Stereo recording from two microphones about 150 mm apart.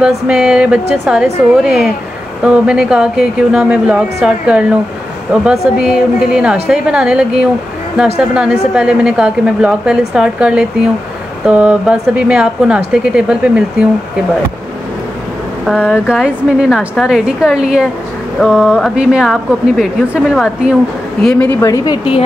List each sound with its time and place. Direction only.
0.0 s a woman's voice: 5° right (ahead or behind)
15.6 s speech: 5° right (ahead or behind); by 21.6 s 10° left (ahead or behind)
21.6 s speech: 25° left (ahead or behind)